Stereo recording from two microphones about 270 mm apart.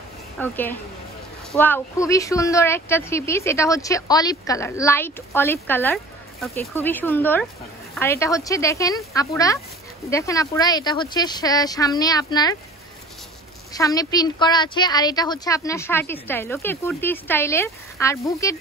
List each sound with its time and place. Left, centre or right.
0.4 s a woman's voice: centre
13.7 s a woman's voice: centre